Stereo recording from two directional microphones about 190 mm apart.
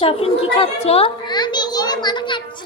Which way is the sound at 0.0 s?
30° left (ahead or behind).